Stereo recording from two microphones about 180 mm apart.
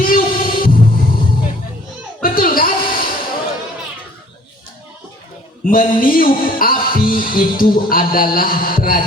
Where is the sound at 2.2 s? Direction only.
50° left (ahead or behind).